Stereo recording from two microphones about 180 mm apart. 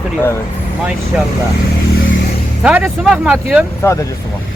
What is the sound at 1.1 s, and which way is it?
Speech, 5° right (ahead or behind).